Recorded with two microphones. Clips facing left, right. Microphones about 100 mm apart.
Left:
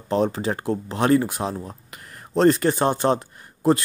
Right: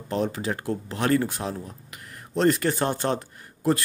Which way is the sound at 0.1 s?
30° left (ahead or behind).